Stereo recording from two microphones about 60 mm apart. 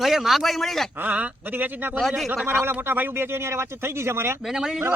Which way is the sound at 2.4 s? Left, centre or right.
Right.